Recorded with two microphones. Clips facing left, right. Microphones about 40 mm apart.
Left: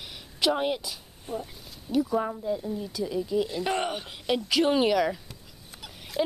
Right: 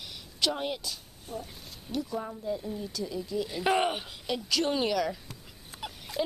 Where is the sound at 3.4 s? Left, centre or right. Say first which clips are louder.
Right 1 dB; centre.